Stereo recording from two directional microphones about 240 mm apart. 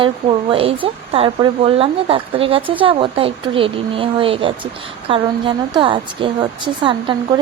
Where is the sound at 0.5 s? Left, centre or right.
Right.